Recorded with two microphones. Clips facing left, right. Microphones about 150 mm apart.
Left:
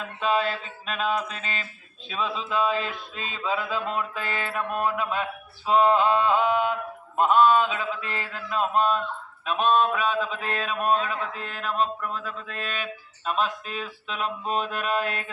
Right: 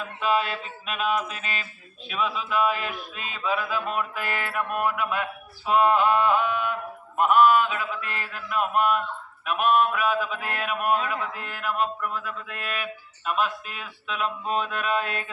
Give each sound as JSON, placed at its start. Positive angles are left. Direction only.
{"t": 0.2, "sound": "mantra", "side_deg": 30}